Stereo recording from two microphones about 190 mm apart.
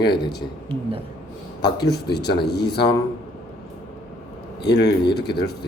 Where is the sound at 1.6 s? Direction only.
60° left (ahead or behind).